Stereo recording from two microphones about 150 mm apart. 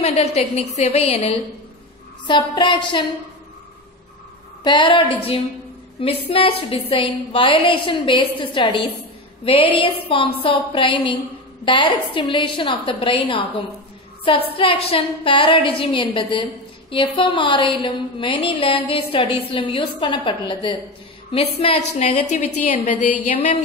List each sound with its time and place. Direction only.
0.0 s a woman's voice: 45° left (ahead or behind)
2.2 s a woman's voice: 30° left (ahead or behind)
4.6 s a woman's voice: 35° left (ahead or behind); by 23.6 s 50° left (ahead or behind)